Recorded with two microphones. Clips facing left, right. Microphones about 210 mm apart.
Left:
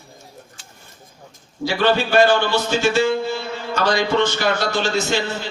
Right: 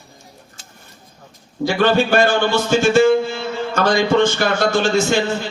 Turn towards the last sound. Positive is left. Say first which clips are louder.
# right 4 dB
turn(degrees=-50)  # may be behind; listen again after turning